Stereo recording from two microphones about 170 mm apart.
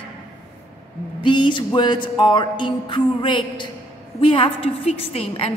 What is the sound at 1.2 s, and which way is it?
Music, 30° left (ahead or behind).